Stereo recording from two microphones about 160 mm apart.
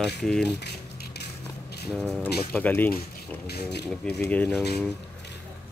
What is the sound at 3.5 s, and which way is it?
Speech, 90° left.